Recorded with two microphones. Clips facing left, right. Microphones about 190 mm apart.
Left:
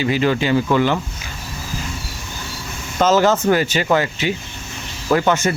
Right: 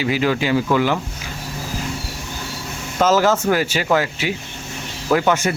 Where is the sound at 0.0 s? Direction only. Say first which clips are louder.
Left 1 dB; 10° right (ahead or behind).